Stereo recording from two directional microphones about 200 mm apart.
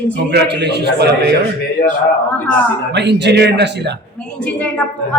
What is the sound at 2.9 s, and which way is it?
A man's voice, 60° right (ahead or behind).